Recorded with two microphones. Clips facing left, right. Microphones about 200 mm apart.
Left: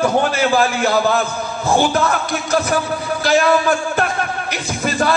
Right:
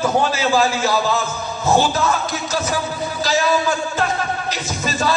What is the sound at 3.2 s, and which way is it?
A man's voice, 60° left (ahead or behind).